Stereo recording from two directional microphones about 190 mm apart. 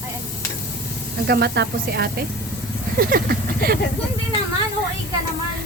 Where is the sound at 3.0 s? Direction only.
50° right (ahead or behind).